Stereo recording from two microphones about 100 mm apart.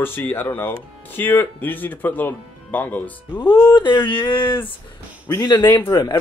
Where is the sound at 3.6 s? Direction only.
50° left (ahead or behind).